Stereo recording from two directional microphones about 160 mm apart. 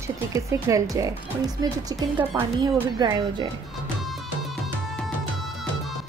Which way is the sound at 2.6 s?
25° right (ahead or behind).